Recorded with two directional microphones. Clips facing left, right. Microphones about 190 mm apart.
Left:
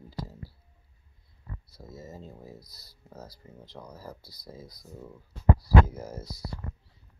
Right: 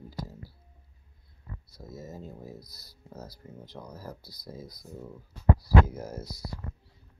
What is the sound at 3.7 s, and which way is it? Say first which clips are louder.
Speech: even; 5° right (ahead or behind).